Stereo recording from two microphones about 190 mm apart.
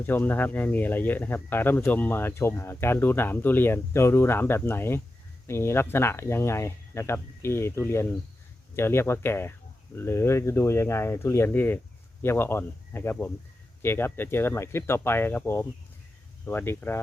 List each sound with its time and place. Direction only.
0.0 s speech: 10° left (ahead or behind)